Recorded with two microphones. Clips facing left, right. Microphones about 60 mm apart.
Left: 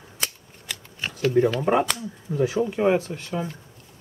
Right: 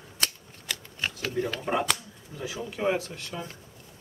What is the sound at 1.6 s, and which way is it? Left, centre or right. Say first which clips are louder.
Speech: left 7 dB; left.